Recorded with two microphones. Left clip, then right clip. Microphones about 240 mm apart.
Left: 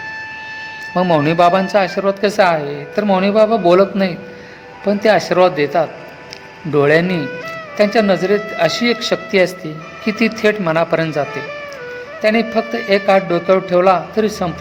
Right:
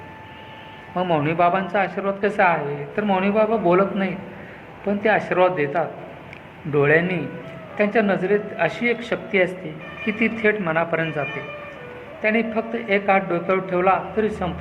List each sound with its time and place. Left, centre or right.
0.9 s speech: left